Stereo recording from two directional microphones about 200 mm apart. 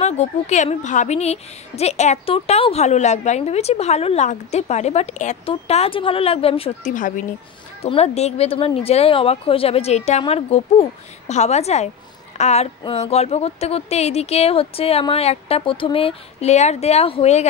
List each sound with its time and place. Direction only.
0.0 s a woman's voice: 35° left (ahead or behind)